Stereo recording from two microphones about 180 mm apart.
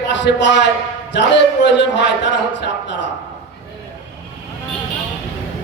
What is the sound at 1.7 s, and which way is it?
Speech, 75° left (ahead or behind).